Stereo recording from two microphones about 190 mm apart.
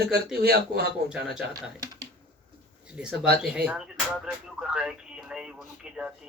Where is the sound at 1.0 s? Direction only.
5° right (ahead or behind).